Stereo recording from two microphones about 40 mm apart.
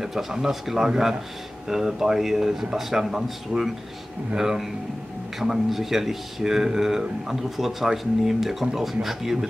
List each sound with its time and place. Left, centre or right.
0.0 s speech: centre